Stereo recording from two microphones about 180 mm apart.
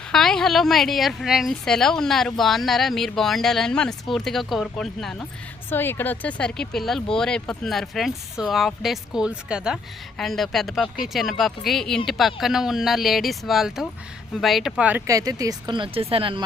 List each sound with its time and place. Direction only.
0.1 s speech: 5° left (ahead or behind); by 16.4 s 30° right (ahead or behind)